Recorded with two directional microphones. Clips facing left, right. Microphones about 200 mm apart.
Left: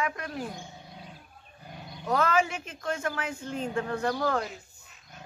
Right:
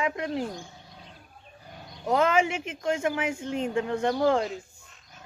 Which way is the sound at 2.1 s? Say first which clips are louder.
Right 3 dB; 20° right (ahead or behind).